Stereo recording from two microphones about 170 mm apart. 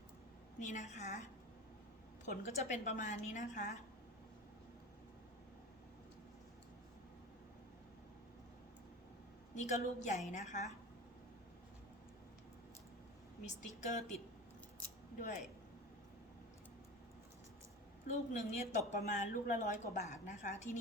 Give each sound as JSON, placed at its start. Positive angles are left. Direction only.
{"t": 0.6, "sound": "a woman's voice", "side_deg": 45}
{"t": 2.2, "sound": "a woman's voice", "side_deg": 45}
{"t": 9.6, "sound": "a woman's voice", "side_deg": 45}
{"t": 13.4, "sound": "a woman's voice", "side_deg": 45}
{"t": 15.2, "sound": "a woman's voice", "side_deg": 45}
{"t": 18.1, "sound": "a woman's voice", "side_deg": 45}